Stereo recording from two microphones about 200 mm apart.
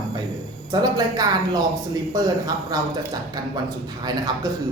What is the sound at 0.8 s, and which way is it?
Speech, 20° right (ahead or behind).